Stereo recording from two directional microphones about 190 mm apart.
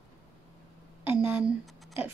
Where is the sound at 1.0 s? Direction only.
10° right (ahead or behind).